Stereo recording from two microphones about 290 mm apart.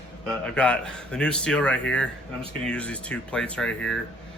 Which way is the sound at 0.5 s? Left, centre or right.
Centre.